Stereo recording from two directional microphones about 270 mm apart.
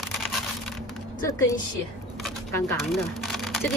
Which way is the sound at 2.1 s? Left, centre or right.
Centre.